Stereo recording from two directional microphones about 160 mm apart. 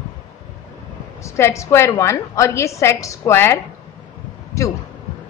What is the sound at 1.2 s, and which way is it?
A woman's voice, 20° left (ahead or behind).